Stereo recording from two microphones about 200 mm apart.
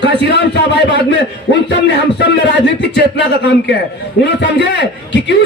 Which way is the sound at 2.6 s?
60° left (ahead or behind).